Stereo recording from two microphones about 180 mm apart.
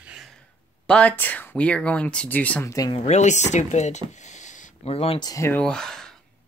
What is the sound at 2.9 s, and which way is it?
Speech, 40° left (ahead or behind).